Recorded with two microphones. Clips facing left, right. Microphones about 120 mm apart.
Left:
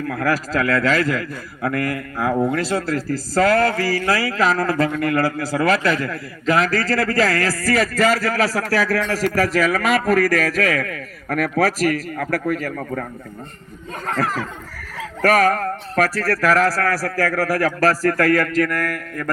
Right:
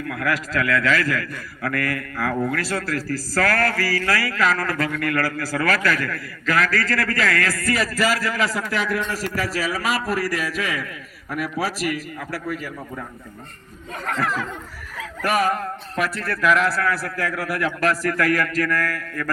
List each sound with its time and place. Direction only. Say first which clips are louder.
0.1 s speech: left 3 dB; 35° left (ahead or behind)
8.6 s a man's voice: left 4 dB; 80° left
9.2 s a man's voice: left 7 dB; 50° left (ahead or behind)
14.1 s a man's voice: left 2 dB; 35° left (ahead or behind)
15.2 s a sound: left 5 dB; 45° left (ahead or behind)
16.3 s a man's voice: left 1 dB; 40° left (ahead or behind)